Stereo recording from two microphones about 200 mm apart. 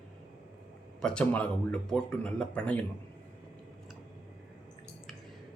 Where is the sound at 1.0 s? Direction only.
5° left (ahead or behind).